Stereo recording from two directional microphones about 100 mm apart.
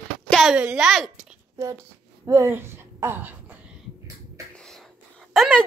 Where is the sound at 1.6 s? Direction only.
35° right (ahead or behind).